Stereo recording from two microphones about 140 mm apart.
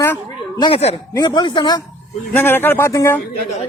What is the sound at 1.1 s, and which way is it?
Speech, 30° left (ahead or behind).